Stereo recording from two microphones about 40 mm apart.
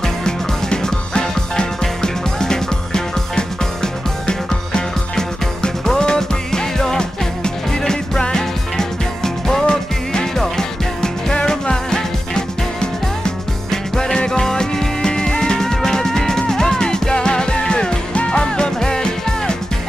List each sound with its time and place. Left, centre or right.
0.0 s music: centre